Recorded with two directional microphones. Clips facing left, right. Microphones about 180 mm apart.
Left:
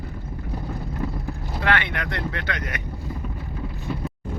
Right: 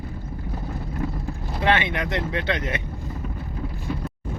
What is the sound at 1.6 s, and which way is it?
Speech, 20° right (ahead or behind).